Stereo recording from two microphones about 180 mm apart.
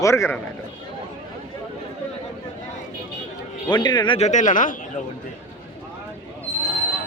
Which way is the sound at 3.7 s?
25° left (ahead or behind).